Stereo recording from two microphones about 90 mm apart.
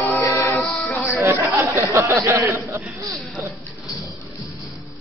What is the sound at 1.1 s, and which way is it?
Speech, 20° right (ahead or behind).